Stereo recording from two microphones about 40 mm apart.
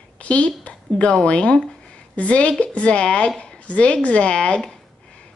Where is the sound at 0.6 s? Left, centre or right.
Left.